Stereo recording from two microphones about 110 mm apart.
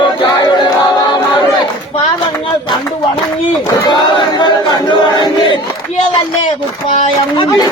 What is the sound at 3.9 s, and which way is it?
Battle cry, 45° left (ahead or behind).